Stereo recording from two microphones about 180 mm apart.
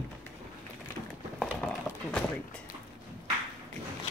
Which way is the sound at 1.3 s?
5° left (ahead or behind).